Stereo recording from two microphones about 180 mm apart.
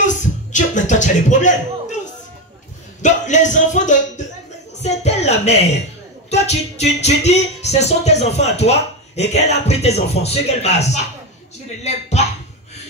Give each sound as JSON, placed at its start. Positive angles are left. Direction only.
{"t": 0.0, "sound": "music", "side_deg": 45}
{"t": 3.0, "sound": "speech", "side_deg": 40}